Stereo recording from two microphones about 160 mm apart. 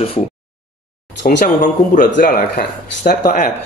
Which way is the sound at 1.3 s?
55° left (ahead or behind).